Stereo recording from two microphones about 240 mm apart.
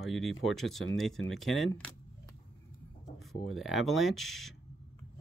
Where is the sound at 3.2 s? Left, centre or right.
Centre.